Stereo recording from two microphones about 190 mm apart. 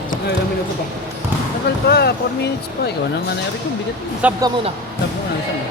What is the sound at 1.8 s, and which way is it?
Speech, 55° left (ahead or behind).